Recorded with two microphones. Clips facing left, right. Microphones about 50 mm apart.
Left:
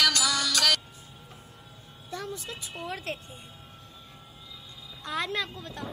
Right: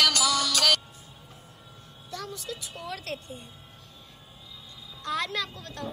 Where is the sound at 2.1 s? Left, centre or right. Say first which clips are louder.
Even; left.